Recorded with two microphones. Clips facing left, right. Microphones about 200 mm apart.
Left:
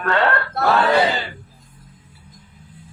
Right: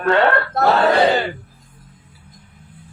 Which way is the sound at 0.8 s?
55° right (ahead or behind).